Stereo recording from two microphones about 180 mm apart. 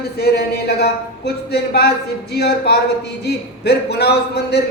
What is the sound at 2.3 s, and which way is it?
A man's voice, 65° left (ahead or behind).